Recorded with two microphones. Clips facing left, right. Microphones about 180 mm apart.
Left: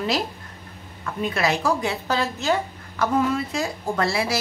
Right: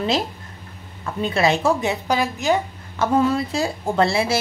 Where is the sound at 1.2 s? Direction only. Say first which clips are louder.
Right 4 dB; 25° right (ahead or behind).